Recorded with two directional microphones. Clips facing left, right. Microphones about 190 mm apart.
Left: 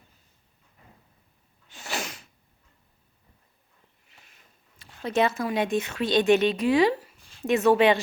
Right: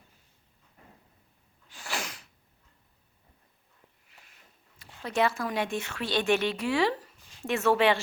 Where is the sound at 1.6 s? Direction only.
25° left (ahead or behind).